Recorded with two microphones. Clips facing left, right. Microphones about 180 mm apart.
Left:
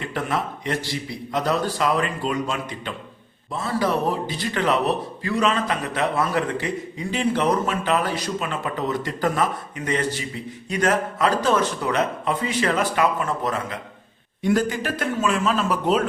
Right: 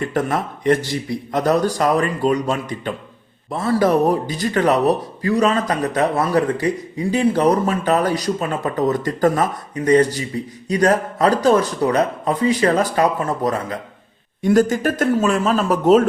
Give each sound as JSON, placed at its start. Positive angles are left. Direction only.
{"t": 0.0, "sound": "speech", "side_deg": -45}